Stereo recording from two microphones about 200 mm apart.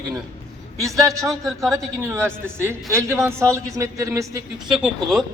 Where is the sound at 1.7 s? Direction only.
15° right (ahead or behind).